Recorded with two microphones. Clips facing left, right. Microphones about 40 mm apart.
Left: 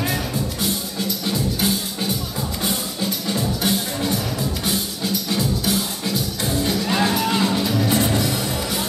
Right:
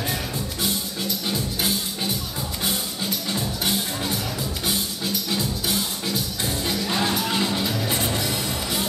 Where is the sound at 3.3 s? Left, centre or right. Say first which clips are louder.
Left 5 dB; centre.